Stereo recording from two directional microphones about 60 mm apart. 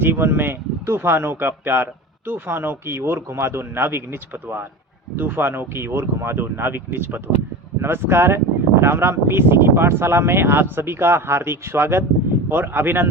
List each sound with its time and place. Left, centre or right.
0.0 s speech: right